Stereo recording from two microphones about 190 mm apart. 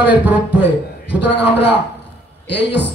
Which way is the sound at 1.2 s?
65° left (ahead or behind).